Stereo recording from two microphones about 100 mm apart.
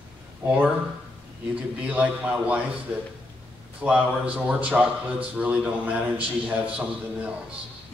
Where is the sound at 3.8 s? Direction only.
10° right (ahead or behind).